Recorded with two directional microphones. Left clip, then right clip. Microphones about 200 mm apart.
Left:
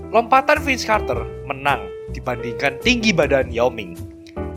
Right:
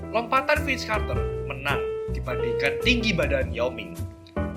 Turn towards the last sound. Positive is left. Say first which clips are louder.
# left 8 dB
turn(degrees=50)  # may be behind; listen again after turning